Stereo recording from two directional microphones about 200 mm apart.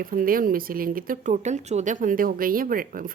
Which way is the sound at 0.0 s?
45° right (ahead or behind).